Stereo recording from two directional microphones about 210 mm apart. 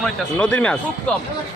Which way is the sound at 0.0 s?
5° left (ahead or behind).